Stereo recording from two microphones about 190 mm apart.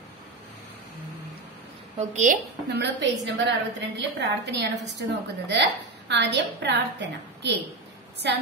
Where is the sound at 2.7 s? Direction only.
65° right (ahead or behind).